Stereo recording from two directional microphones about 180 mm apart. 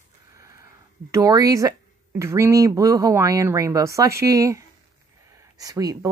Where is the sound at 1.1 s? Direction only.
20° right (ahead or behind).